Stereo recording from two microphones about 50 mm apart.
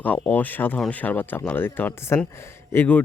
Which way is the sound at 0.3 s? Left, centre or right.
Left.